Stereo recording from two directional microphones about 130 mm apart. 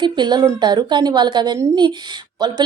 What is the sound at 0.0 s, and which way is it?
Speech, 35° right (ahead or behind).